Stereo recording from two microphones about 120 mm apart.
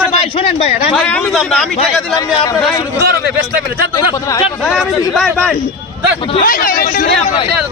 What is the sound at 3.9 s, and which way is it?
Speech, 30° left (ahead or behind).